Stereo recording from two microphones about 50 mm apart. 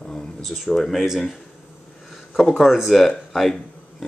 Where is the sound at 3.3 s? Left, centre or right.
Centre.